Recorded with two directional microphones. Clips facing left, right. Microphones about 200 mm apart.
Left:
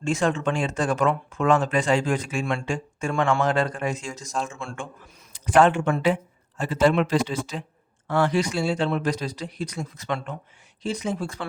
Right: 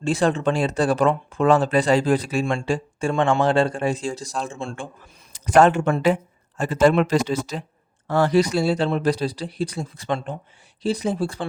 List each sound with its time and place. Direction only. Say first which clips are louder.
0.0 s speech: right 3 dB; 35° right (ahead or behind)
5.3 s speech: right 3 dB; 40° right (ahead or behind)